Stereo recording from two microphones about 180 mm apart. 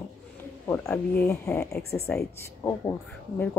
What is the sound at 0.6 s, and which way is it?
A woman's voice, 10° left (ahead or behind).